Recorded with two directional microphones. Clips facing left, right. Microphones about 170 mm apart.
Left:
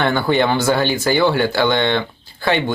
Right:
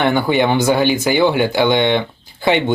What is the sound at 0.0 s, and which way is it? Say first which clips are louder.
Speech: right 2 dB; 15° right (ahead or behind).